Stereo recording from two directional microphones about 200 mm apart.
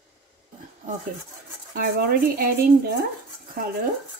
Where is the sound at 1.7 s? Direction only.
45° right (ahead or behind).